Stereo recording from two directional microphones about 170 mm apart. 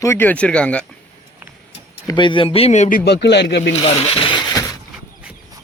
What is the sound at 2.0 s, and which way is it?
Speech, 25° left (ahead or behind).